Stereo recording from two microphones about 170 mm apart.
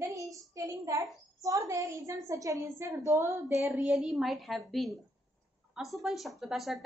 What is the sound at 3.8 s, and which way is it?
A woman's voice, 5° right (ahead or behind).